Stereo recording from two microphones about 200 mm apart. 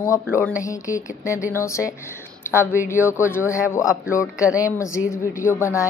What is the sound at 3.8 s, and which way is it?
Speech, 5° right (ahead or behind).